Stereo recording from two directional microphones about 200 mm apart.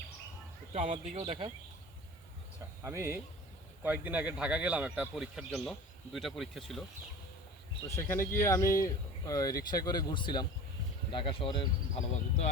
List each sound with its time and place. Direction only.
0.7 s speech: 35° right (ahead or behind)
2.8 s speech: 10° right (ahead or behind)
7.9 s speech: 10° left (ahead or behind); by 12.5 s 30° left (ahead or behind)